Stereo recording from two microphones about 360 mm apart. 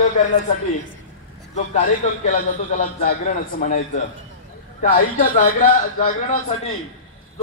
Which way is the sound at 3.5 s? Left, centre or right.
Left.